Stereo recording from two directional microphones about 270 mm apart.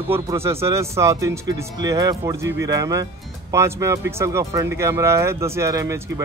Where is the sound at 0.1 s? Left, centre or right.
Centre.